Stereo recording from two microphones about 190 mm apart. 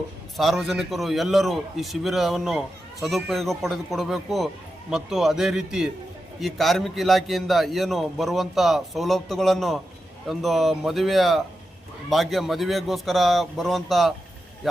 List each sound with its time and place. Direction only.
0.3 s a man's voice: centre (ahead or behind)